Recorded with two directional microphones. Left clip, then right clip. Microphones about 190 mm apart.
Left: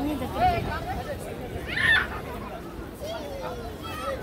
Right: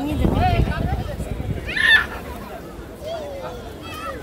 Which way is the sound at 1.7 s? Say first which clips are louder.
Right 7 dB; 40° right (ahead or behind).